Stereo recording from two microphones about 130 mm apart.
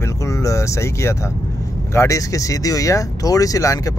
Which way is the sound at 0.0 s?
25° left (ahead or behind).